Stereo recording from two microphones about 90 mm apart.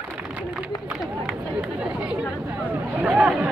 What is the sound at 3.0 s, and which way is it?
Chatter, 15° right (ahead or behind).